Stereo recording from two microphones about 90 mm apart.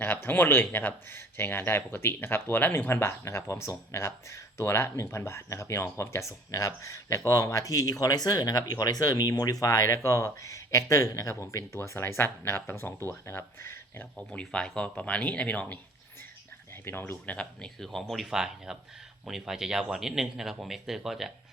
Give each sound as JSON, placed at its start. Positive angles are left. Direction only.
{"t": 0.0, "sound": "speech", "side_deg": 20}
{"t": 14.2, "sound": "speech", "side_deg": 10}
{"t": 16.8, "sound": "speech", "side_deg": 25}